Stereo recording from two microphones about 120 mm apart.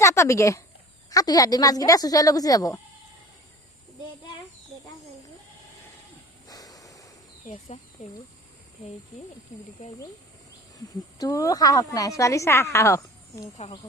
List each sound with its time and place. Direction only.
0.0 s a woman's voice: 25° left (ahead or behind)
6.5 s a sound: 30° left (ahead or behind)
7.4 s speech: 80° left
11.2 s a woman's voice: 30° left (ahead or behind)